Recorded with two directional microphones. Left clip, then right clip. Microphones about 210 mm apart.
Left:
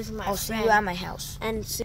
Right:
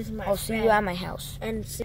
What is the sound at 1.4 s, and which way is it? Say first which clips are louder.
Speech: left 4 dB; 45° left (ahead or behind).